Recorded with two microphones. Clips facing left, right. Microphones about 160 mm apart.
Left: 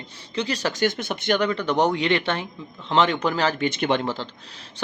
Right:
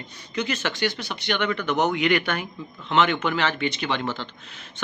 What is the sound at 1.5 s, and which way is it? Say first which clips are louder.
Speech: left 2 dB; 30° left (ahead or behind).